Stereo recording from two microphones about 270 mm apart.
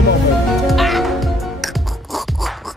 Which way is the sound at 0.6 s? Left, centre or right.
Centre.